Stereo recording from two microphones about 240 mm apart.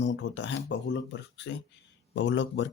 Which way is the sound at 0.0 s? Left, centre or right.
Left.